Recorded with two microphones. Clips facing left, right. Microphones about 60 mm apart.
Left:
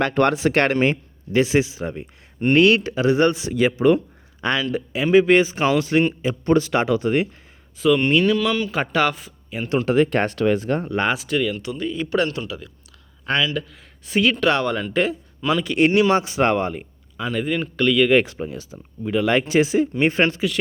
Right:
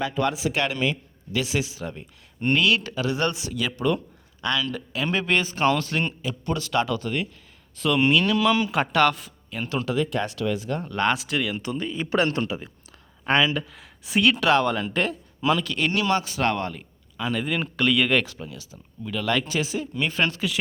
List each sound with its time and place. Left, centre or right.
0.0 s speech: left
2.6 s speech: left
4.7 s a man's voice: centre
6.2 s speech: left
7.8 s speech: centre
9.8 s speech: left
11.0 s speech: centre
11.5 s a man's voice: centre
13.6 s speech: centre
15.8 s speech: left
17.2 s speech: centre
18.1 s speech: left